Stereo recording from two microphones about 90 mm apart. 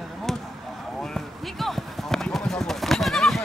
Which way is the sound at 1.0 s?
5° left (ahead or behind).